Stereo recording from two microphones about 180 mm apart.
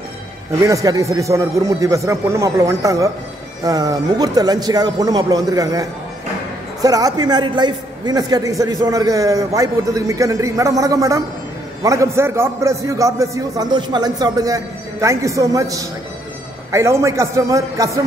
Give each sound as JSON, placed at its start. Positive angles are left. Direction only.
{"t": 0.6, "sound": "a man's voice", "side_deg": -20}